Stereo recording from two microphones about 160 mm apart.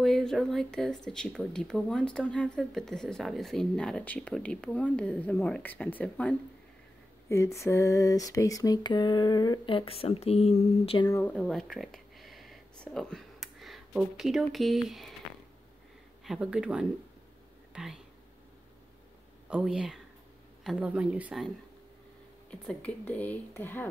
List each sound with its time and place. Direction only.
0.0 s speech: centre (ahead or behind)
7.2 s a sound: 20° left (ahead or behind); by 11.0 s 40° left (ahead or behind)
11.1 s speech: 10° left (ahead or behind)
16.3 s speech: 5° right (ahead or behind)
19.5 s a woman's voice: 5° right (ahead or behind)
22.5 s speech: 5° left (ahead or behind)